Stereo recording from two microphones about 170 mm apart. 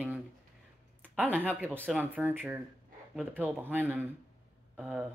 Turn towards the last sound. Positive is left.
turn(degrees=-5)  # may be behind; listen again after turning